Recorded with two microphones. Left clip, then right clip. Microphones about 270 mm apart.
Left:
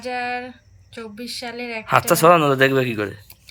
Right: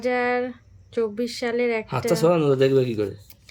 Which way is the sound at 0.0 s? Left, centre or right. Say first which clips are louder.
Right 3 dB; centre.